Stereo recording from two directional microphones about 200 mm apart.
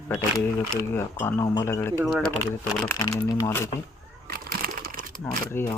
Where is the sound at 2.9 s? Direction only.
20° left (ahead or behind).